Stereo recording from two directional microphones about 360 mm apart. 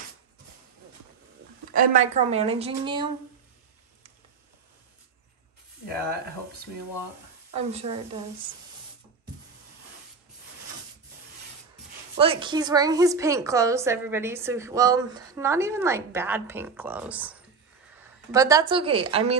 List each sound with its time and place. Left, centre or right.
1.7 s a woman's voice: right
7.5 s a woman's voice: centre
12.2 s a woman's voice: centre